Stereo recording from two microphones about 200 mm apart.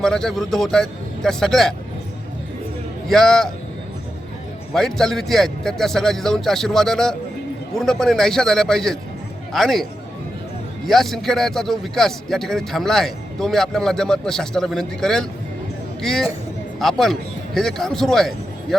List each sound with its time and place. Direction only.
0.0 s a man's voice: centre (ahead or behind)
3.1 s a man's voice: centre (ahead or behind)
4.7 s a man's voice: centre (ahead or behind)
10.8 s a man's voice: centre (ahead or behind)